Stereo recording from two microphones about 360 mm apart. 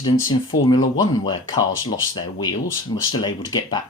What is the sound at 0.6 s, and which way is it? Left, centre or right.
Speech, centre.